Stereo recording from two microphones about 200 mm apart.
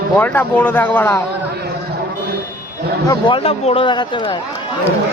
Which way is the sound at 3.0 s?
25° left (ahead or behind).